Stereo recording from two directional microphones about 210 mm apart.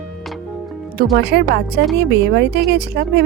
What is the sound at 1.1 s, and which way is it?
A woman's voice, 50° right (ahead or behind).